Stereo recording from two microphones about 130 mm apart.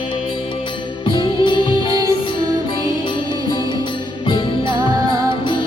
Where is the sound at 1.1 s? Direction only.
40° left (ahead or behind).